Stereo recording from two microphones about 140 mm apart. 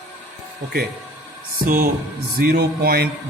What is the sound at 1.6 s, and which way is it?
Speech, 90° right.